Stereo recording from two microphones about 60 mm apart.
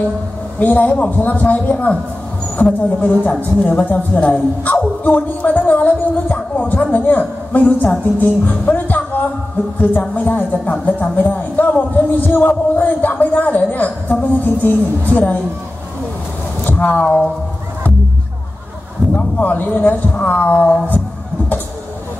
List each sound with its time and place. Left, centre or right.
0.6 s a woman's voice: left
8.7 s music: left
9.8 s a woman's voice: left
16.6 s speech: left
19.1 s a woman's voice: left